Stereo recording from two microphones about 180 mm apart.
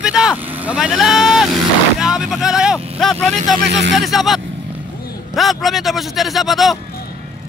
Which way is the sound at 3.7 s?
80° right.